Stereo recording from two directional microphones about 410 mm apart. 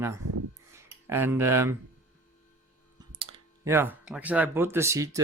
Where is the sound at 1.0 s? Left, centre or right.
Centre.